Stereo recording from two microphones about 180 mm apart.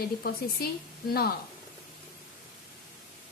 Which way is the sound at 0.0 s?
60° left (ahead or behind).